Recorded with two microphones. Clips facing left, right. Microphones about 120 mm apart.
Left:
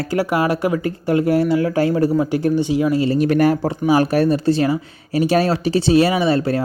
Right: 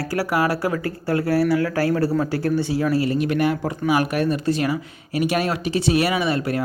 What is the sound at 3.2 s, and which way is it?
Speech, 40° left (ahead or behind).